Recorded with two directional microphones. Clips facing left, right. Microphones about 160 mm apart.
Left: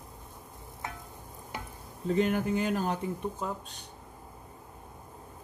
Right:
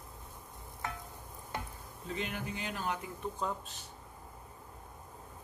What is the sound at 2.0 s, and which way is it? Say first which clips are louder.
Speech: left 12 dB; 45° left (ahead or behind).